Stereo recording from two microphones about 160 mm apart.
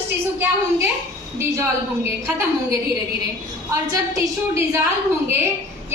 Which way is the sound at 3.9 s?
20° right (ahead or behind).